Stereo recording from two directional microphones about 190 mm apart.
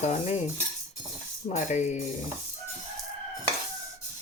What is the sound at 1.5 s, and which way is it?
Speech, 40° left (ahead or behind).